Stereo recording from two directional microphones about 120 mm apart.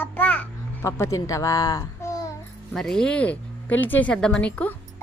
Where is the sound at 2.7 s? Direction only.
5° left (ahead or behind).